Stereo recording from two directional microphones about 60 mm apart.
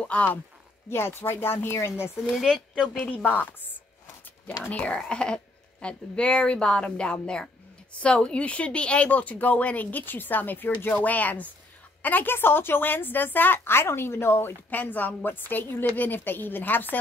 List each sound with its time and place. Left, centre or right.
0.0 s speech: left
0.8 s a woman's voice: left
2.2 s speech: centre
3.1 s a woman's voice: left